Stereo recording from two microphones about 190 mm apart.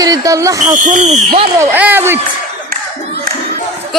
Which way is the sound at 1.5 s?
10° right (ahead or behind).